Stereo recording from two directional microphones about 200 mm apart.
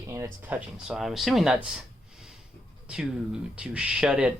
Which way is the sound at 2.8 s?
5° right (ahead or behind).